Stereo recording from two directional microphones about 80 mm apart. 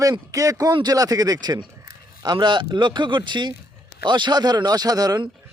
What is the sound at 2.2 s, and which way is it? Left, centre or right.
Speech, right.